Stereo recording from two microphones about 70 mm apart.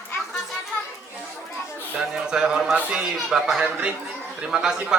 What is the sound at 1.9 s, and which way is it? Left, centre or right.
Speech, centre.